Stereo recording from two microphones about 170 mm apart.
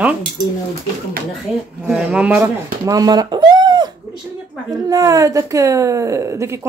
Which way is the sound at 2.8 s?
20° right (ahead or behind).